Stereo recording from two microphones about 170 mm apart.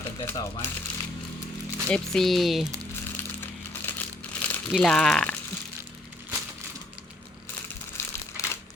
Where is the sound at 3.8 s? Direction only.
10° left (ahead or behind).